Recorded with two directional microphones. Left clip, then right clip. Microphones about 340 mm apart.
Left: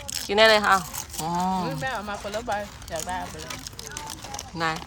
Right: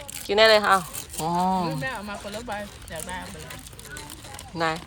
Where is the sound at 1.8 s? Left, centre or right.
Left.